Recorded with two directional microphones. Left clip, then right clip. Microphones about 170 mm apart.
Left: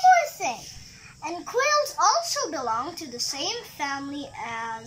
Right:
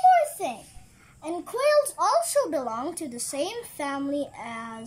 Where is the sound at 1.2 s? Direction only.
50° right (ahead or behind).